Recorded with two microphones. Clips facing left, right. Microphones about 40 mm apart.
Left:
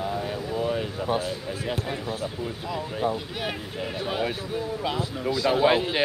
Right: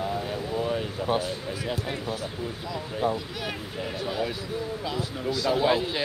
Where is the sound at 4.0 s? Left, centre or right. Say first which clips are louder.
Left 2 dB; left.